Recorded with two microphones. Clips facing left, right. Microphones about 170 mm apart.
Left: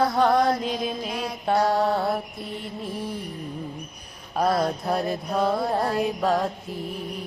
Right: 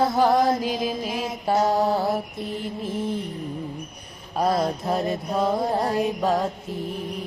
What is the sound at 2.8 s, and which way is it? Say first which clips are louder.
Music: right 5 dB; 25° right (ahead or behind).